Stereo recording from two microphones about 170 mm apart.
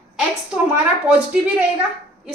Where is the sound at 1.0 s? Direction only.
10° right (ahead or behind).